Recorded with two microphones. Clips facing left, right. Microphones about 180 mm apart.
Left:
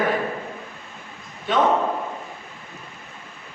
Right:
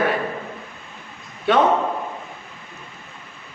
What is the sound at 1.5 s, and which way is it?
Speech, 70° right (ahead or behind).